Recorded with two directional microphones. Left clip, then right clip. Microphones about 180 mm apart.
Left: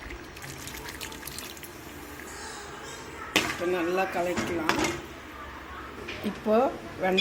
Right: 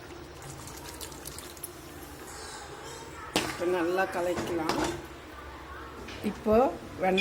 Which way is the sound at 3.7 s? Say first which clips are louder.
Left 1 dB; centre (ahead or behind).